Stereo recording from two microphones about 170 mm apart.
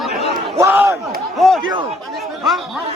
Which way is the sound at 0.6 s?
15° right (ahead or behind).